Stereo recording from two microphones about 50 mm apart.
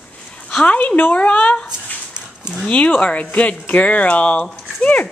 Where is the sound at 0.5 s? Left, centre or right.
Left.